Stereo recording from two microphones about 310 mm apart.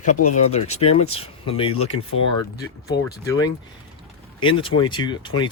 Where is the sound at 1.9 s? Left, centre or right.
Left.